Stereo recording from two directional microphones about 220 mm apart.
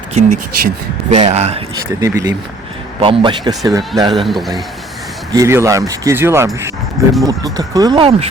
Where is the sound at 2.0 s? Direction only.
15° right (ahead or behind).